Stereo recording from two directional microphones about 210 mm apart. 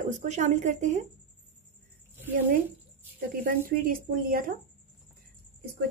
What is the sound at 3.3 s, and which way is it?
Speech, 45° right (ahead or behind).